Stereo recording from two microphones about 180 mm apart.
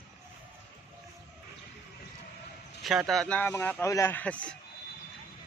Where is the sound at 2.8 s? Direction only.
Centre (ahead or behind).